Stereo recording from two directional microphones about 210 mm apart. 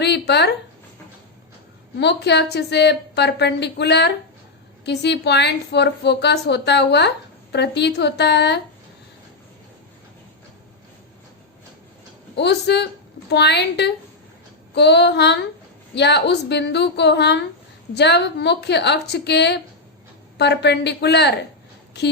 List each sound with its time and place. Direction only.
0.0 s a sound: 55° left (ahead or behind)
2.0 s a woman's voice: 55° left (ahead or behind)
12.4 s a woman's voice: 55° left (ahead or behind)